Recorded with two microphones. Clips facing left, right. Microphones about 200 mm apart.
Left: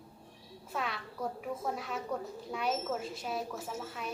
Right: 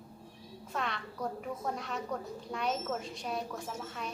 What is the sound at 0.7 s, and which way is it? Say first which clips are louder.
A child's voice: even; 5° left (ahead or behind).